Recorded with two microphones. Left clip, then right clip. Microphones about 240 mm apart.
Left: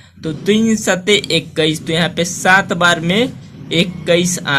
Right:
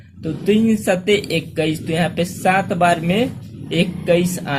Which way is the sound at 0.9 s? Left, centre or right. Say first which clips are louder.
Left 4 dB; left.